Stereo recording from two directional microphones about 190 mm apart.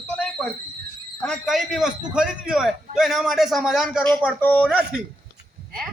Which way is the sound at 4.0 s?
10° left (ahead or behind).